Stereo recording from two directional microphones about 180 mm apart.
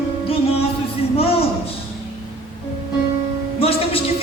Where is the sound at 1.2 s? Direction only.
35° left (ahead or behind).